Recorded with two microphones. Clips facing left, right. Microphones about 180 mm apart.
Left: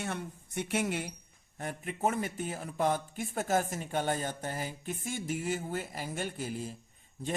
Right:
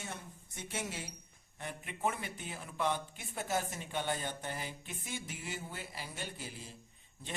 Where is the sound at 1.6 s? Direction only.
45° left (ahead or behind).